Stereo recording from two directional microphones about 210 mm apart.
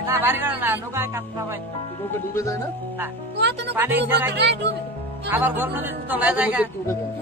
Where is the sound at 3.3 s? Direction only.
55° right (ahead or behind).